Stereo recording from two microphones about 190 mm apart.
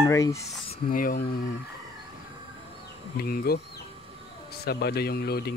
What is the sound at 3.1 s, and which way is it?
A man's voice, 50° left (ahead or behind).